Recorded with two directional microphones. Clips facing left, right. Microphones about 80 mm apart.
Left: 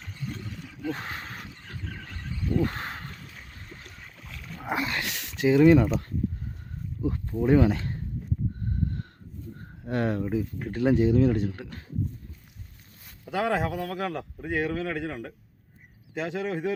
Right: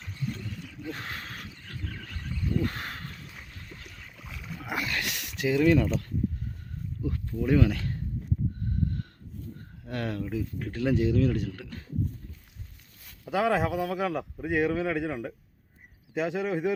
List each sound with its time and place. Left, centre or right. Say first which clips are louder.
0.9 s a sound: left 5 dB; left
3.8 s boat: even; centre
4.6 s dog: left 3 dB; left
5.4 s speech: left 5 dB; left
7.0 s speech: left 4 dB; left
9.8 s speech: left 5 dB; left
13.2 s a man's voice: right 1 dB; centre